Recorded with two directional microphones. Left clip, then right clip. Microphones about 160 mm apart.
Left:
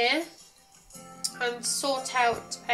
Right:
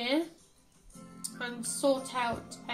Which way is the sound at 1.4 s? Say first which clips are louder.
Left 2 dB; 65° right (ahead or behind).